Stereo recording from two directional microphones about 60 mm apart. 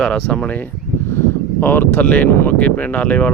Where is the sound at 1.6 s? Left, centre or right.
Left.